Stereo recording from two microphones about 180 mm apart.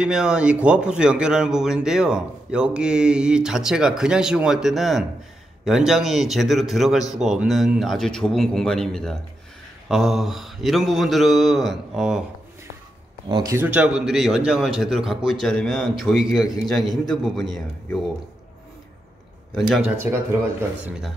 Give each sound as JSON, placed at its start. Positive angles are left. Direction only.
{"t": 0.0, "sound": "a man's voice", "side_deg": -5}
{"t": 13.3, "sound": "speech", "side_deg": -20}
{"t": 13.6, "sound": "a man's voice", "side_deg": -5}
{"t": 19.5, "sound": "a man's voice", "side_deg": 0}
{"t": 20.0, "sound": "speech", "side_deg": -15}